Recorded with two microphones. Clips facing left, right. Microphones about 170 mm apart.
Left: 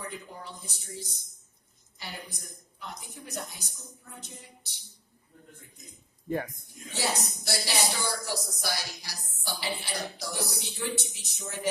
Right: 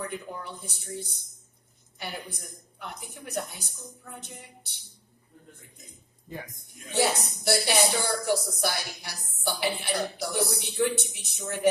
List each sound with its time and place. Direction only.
0.0 s speech: 60° right (ahead or behind)
6.2 s a man's voice: 55° left (ahead or behind)
6.8 s speech: 60° right (ahead or behind)